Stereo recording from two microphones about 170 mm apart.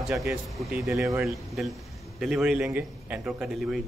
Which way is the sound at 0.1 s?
Centre (ahead or behind).